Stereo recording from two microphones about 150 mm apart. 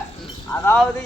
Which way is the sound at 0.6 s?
5° left (ahead or behind).